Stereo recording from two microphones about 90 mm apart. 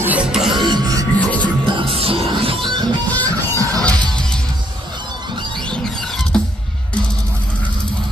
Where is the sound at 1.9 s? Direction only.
90° right.